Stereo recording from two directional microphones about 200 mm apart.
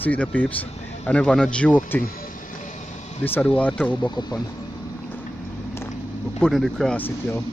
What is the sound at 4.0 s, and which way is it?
Speech, 20° left (ahead or behind).